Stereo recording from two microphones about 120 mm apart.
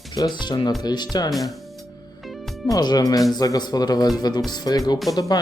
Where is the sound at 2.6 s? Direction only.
30° left (ahead or behind).